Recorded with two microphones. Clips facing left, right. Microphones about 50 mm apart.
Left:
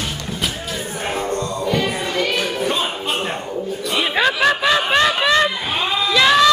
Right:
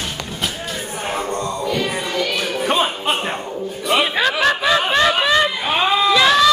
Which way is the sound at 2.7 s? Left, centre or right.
Right.